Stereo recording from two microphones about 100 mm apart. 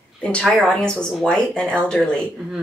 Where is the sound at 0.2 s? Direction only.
10° left (ahead or behind).